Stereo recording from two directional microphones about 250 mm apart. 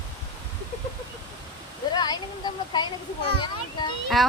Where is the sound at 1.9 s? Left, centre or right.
Centre.